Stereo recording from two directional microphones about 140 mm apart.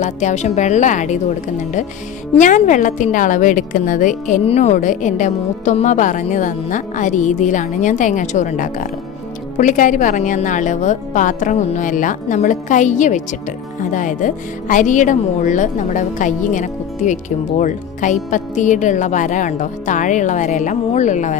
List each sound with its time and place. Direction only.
0.0 s speech: 55° left (ahead or behind)
2.4 s a woman's voice: 65° left (ahead or behind)
4.4 s speech: 50° left (ahead or behind)